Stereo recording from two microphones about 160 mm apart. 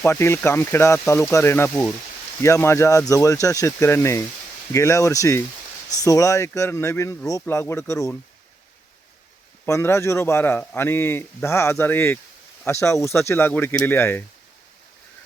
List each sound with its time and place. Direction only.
0.0 s speech: 15° left (ahead or behind)
9.6 s speech: 15° left (ahead or behind)